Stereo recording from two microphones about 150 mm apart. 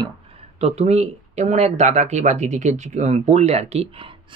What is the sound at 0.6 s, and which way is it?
Speech, 45° right (ahead or behind).